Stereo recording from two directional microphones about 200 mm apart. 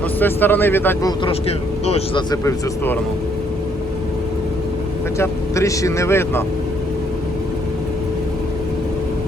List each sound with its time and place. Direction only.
0.2 s speech: 10° left (ahead or behind)
1.2 s speech: 30° left (ahead or behind)
2.3 s speech: 15° left (ahead or behind)
5.1 s speech: 15° left (ahead or behind)